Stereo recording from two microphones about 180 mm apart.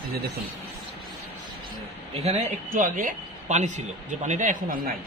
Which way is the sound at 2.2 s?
40° right (ahead or behind).